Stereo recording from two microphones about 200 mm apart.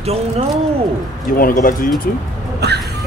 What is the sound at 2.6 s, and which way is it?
Vehicle, 55° right (ahead or behind).